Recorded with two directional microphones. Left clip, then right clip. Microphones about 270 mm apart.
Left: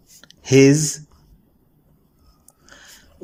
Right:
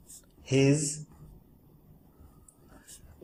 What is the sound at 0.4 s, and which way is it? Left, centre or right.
Speech, left.